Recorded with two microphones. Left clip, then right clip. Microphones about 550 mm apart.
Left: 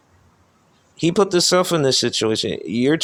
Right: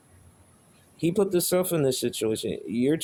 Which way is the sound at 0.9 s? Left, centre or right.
Right.